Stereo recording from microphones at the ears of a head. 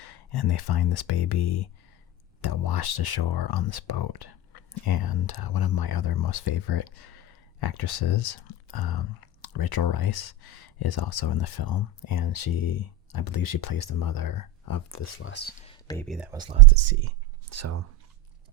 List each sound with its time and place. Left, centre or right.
0.0 s speech: left
16.5 s speech: right